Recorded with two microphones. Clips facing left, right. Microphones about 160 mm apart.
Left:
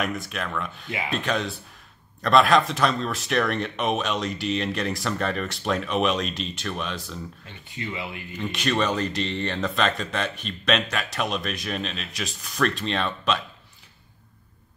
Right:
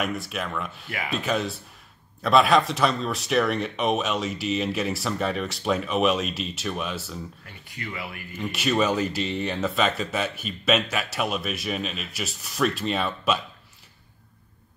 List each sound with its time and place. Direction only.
0.0 s speech: centre (ahead or behind)
7.4 s speech: 25° left (ahead or behind)
8.4 s speech: 5° right (ahead or behind)